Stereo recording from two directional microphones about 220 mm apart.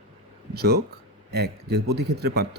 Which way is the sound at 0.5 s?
45° right (ahead or behind).